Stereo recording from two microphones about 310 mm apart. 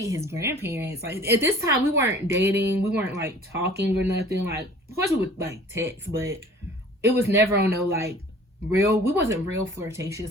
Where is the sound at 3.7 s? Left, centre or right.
Right.